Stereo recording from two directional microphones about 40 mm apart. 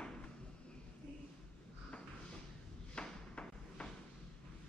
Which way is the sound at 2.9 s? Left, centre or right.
Left.